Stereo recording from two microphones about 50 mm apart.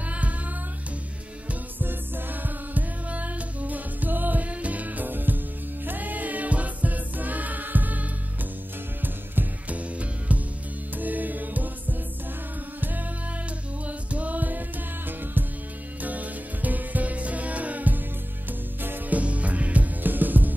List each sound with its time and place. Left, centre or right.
0.0 s music: right
1.5 s music: right
13.8 s music: right
16.0 s music: right
19.1 s music: right